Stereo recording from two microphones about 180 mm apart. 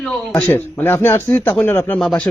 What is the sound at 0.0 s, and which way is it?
Speech, 5° left (ahead or behind).